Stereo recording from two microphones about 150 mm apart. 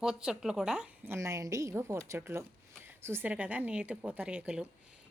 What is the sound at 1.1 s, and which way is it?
A woman's voice, 20° right (ahead or behind).